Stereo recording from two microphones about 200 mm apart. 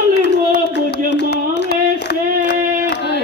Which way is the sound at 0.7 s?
60° left (ahead or behind).